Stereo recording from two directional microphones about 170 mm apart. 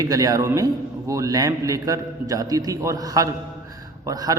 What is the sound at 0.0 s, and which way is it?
A man's voice, 20° right (ahead or behind).